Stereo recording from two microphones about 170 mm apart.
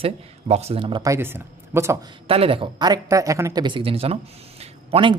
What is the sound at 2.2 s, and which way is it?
Speech, 35° right (ahead or behind).